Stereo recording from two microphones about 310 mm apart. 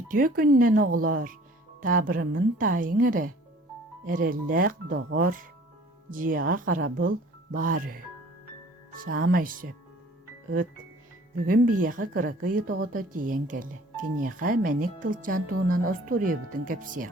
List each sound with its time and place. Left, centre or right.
0.1 s speech: right
11.4 s speech: right